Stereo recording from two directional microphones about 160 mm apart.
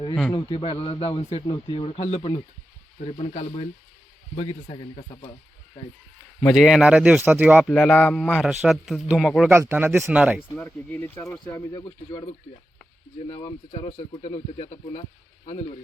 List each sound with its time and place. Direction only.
0.3 s speech: 30° left (ahead or behind)
1.5 s speech: 30° left (ahead or behind)
6.4 s a man's voice: centre (ahead or behind)
7.6 s a man's voice: 5° left (ahead or behind)
9.5 s speech: 15° right (ahead or behind)
10.6 s speech: 15° left (ahead or behind)
13.7 s speech: 30° left (ahead or behind)